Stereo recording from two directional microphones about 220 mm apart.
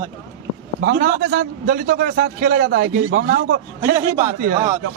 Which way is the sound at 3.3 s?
55° right (ahead or behind).